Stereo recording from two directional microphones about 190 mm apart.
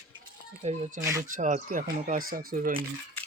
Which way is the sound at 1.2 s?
45° right (ahead or behind).